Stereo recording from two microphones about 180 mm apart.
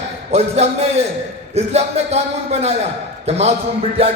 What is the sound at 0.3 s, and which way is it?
Speech, 35° right (ahead or behind).